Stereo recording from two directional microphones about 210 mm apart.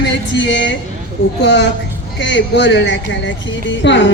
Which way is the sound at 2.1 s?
60° left (ahead or behind).